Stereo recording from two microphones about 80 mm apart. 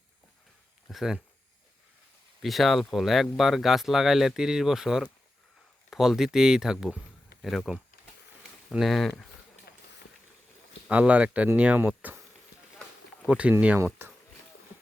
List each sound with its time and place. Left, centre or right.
0.9 s speech: centre
2.4 s speech: centre
8.7 s speech: centre
10.8 s speech: centre
13.7 s speech: right